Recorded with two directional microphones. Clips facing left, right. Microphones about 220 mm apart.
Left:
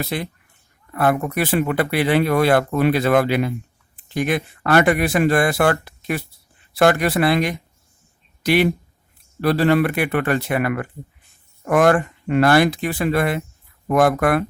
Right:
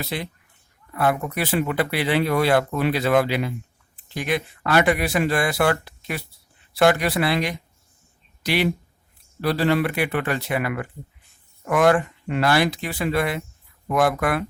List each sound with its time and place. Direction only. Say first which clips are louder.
0.0 s speech: left 4 dB; 50° left (ahead or behind)